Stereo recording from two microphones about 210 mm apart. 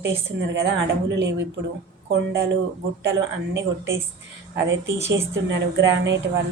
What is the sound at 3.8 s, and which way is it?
Speech, 15° right (ahead or behind).